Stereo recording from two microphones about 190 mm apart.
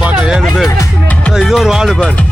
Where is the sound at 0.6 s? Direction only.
15° left (ahead or behind).